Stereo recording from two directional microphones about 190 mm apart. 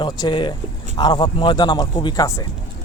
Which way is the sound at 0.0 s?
25° left (ahead or behind).